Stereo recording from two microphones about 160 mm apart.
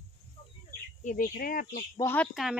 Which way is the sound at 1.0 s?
60° left (ahead or behind).